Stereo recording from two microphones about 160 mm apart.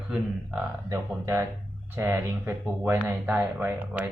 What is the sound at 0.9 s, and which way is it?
A man's voice, 15° right (ahead or behind).